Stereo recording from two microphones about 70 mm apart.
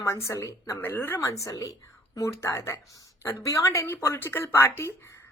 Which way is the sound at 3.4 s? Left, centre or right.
Left.